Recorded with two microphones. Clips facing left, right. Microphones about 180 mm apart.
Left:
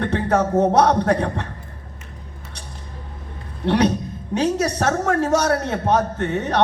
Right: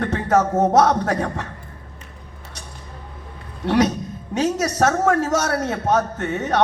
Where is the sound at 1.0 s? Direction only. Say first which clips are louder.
Left 3 dB; 30° left (ahead or behind).